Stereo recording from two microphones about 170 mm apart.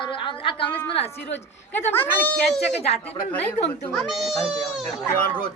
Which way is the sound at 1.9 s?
10° left (ahead or behind).